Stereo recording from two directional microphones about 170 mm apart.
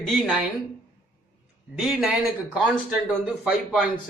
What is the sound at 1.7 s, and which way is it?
A man's voice, 5° right (ahead or behind).